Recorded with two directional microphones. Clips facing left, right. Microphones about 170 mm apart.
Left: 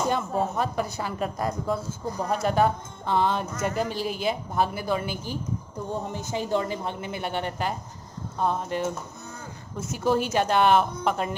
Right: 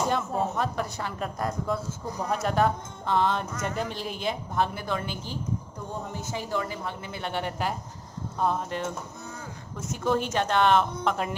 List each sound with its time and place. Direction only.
0.1 s a woman's voice: 5° left (ahead or behind)
6.3 s a woman's voice: 25° left (ahead or behind)
7.3 s a woman's voice: 5° right (ahead or behind)
9.9 s speech: 5° left (ahead or behind)